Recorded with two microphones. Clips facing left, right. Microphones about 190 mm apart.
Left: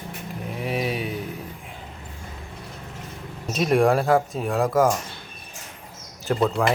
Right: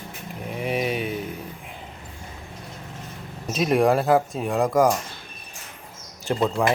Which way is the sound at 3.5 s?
Centre (ahead or behind).